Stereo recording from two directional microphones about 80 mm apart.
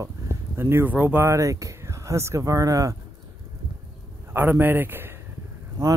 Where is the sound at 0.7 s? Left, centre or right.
Right.